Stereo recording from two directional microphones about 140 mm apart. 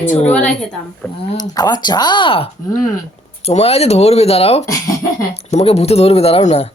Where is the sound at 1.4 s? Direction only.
30° left (ahead or behind); by 6.6 s 50° left (ahead or behind).